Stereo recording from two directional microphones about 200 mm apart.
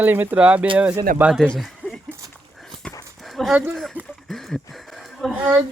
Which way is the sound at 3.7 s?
Centre (ahead or behind).